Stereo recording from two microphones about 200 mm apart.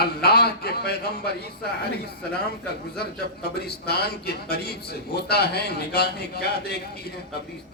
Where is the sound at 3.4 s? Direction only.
55° left (ahead or behind).